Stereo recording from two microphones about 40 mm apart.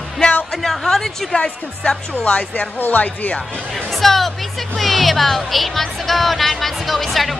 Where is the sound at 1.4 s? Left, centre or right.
Left.